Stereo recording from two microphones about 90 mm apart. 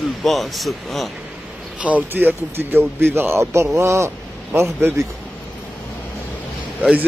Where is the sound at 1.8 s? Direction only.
15° right (ahead or behind); by 4.1 s 35° right (ahead or behind).